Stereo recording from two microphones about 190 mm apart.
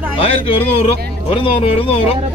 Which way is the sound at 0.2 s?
30° left (ahead or behind).